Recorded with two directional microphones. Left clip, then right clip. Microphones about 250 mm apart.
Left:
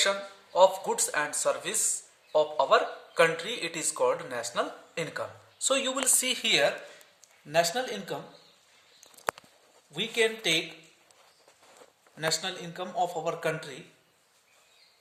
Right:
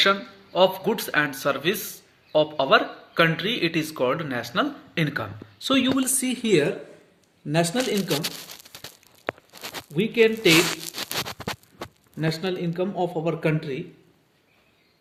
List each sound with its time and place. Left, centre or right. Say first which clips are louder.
0.0 s a man's voice: right 7 dB; centre
9.9 s a man's voice: right 7 dB; left
12.2 s a man's voice: right 4 dB; left